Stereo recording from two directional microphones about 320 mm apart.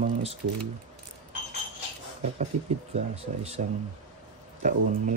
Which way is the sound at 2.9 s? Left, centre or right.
Centre.